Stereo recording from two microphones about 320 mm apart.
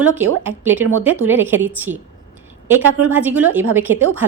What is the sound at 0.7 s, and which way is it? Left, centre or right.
Speech, right.